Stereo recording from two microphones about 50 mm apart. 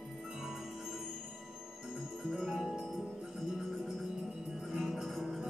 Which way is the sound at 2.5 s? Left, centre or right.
Centre.